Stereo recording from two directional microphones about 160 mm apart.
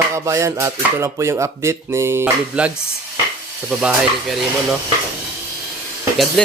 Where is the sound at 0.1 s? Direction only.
20° right (ahead or behind); by 4.8 s 5° right (ahead or behind).